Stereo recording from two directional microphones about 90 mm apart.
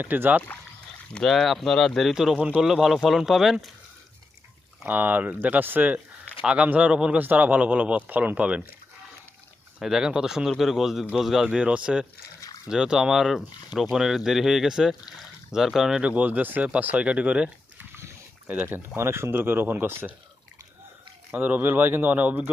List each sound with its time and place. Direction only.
0.0 s speech: 20° right (ahead or behind)
1.1 s speech: 5° left (ahead or behind)
4.9 s speech: 20° right (ahead or behind)
9.8 s speech: 5° right (ahead or behind); by 20.1 s 20° right (ahead or behind)
21.3 s speech: 20° right (ahead or behind)